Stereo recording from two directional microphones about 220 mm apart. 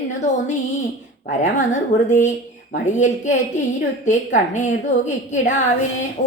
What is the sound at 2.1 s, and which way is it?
A woman's voice, 35° left (ahead or behind).